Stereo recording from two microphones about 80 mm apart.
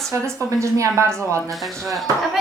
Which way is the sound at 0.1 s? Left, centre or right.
Right.